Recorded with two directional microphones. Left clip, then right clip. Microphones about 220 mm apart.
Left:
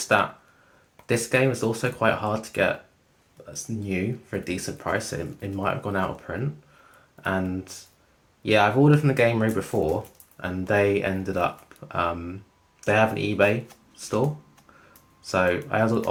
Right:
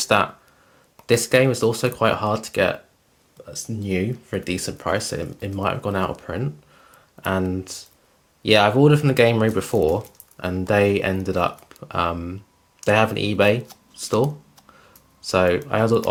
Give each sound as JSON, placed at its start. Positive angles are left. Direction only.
{"t": 1.0, "sound": "speech", "side_deg": -45}
{"t": 3.4, "sound": "a sound", "side_deg": -40}
{"t": 3.8, "sound": "speech", "side_deg": -45}
{"t": 15.3, "sound": "speech", "side_deg": -45}